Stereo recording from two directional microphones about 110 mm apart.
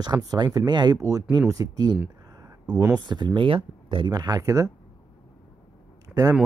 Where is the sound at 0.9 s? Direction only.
30° right (ahead or behind).